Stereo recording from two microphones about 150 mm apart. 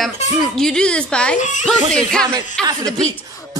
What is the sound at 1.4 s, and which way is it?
Speech, 55° left (ahead or behind).